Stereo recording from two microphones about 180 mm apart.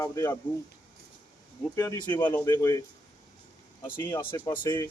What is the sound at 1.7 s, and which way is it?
Speech, 20° left (ahead or behind).